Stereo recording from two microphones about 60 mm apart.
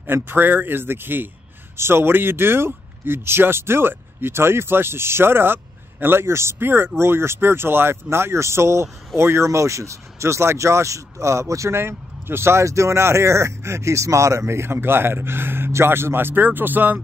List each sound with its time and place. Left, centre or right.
0.0 s speech: right
11.7 s speech: right